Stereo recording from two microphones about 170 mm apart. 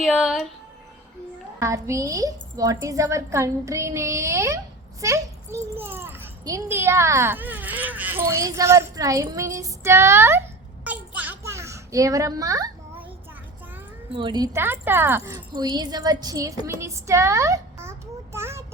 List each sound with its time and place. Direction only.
0.0 s speech: 5° right (ahead or behind)
1.5 s a woman's voice: 20° right (ahead or behind)
10.8 s a sound: 10° right (ahead or behind)
14.1 s a child's voice: 30° right (ahead or behind)